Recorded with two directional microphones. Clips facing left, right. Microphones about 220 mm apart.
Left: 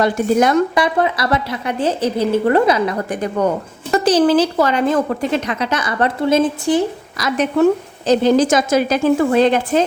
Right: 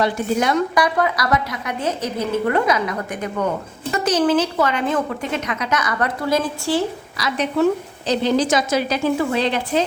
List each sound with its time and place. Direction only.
0.0 s a woman's voice: 45° left (ahead or behind)
0.8 s a woman's voice: 25° left (ahead or behind)
7.2 s a woman's voice: 45° left (ahead or behind)